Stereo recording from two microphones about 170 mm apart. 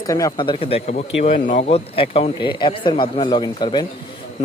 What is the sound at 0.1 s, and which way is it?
Speech, 20° left (ahead or behind).